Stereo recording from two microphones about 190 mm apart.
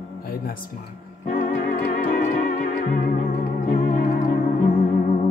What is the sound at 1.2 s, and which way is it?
Organ, 40° left (ahead or behind).